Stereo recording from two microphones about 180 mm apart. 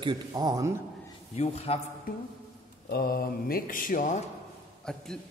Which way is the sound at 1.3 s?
35° left (ahead or behind).